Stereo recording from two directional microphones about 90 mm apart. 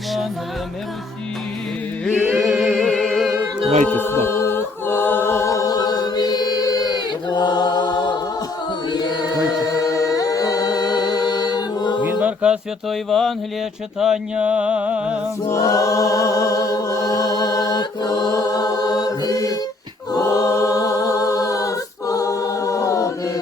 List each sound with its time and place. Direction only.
2.1 s mantra: 15° right (ahead or behind)
2.4 s music: centre (ahead or behind)
3.9 s a capella: 25° left (ahead or behind); by 12.0 s 55° left (ahead or behind)
12.0 s chant: 15° right (ahead or behind)
12.9 s mantra: 5° left (ahead or behind)
14.0 s mantra: 10° right (ahead or behind)
15.4 s a capella: 35° left (ahead or behind)